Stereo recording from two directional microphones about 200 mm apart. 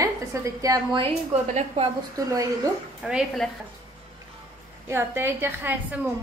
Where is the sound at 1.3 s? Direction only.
30° right (ahead or behind).